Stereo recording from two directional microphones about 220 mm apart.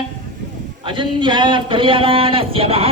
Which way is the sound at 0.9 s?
20° right (ahead or behind).